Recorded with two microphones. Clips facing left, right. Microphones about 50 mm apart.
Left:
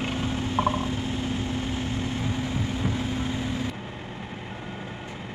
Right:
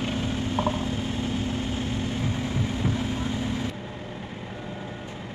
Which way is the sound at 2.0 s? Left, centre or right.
Left.